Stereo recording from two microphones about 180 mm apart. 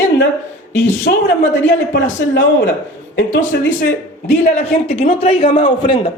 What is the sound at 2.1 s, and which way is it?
Speech, 90° left.